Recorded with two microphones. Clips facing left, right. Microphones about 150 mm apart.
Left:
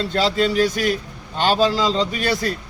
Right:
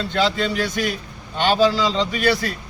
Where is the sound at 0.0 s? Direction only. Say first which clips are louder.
Even; 35° left (ahead or behind).